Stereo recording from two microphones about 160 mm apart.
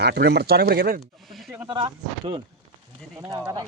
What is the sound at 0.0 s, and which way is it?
Speech, 90° right.